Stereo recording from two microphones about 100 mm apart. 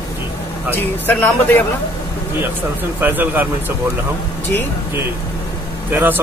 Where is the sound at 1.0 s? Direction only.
20° left (ahead or behind).